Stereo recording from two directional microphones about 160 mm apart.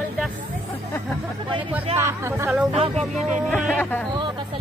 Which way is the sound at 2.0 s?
15° right (ahead or behind).